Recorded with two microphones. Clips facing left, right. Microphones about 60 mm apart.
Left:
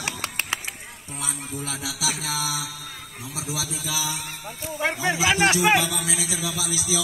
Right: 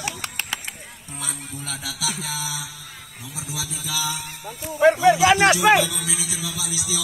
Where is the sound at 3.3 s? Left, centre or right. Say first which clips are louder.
Left 2 dB; left.